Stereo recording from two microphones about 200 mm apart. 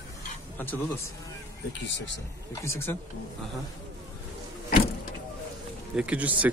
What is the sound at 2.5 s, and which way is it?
Speech, 15° left (ahead or behind).